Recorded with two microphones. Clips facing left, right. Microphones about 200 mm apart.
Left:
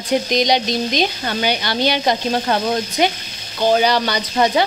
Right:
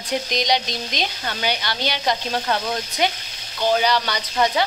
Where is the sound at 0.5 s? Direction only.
45° left (ahead or behind).